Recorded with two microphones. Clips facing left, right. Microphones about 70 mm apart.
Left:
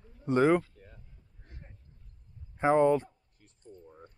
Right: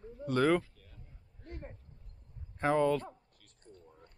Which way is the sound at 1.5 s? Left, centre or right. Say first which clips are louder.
Right 9 dB; right.